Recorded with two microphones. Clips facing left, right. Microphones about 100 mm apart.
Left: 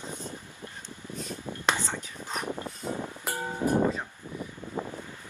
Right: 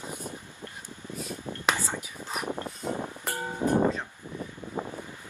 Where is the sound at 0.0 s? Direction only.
10° right (ahead or behind).